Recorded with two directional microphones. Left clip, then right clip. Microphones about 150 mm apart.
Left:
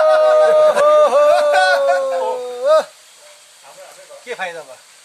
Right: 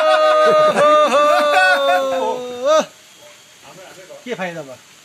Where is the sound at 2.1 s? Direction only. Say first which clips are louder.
Even; 25° left (ahead or behind).